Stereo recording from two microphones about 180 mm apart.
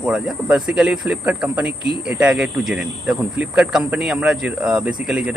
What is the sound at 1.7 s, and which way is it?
Speech, 70° right (ahead or behind).